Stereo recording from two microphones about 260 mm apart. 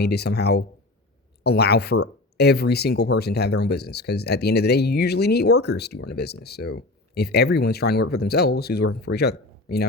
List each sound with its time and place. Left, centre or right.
0.0 s speech: left